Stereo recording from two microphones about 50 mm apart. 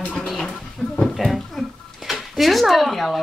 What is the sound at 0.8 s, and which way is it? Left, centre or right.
Speech, centre.